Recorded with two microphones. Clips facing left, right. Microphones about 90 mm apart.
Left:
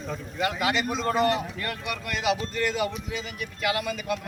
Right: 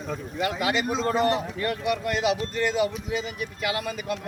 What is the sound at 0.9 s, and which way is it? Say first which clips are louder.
A man's voice: right 1 dB; 30° right (ahead or behind).